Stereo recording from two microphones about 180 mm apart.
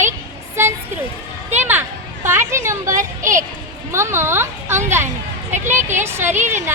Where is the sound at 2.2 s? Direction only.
15° right (ahead or behind).